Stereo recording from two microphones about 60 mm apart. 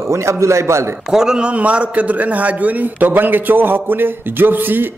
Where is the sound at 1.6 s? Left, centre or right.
Right.